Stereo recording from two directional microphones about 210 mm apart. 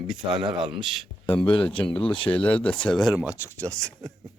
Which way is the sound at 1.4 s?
25° left (ahead or behind).